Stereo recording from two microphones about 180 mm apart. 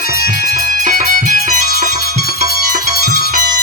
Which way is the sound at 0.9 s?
45° right (ahead or behind).